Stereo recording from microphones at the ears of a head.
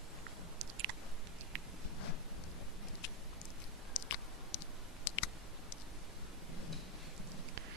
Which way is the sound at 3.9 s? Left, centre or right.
Left.